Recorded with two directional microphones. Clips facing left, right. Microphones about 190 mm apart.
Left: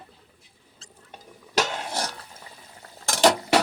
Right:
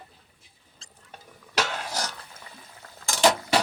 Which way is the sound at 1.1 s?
15° left (ahead or behind).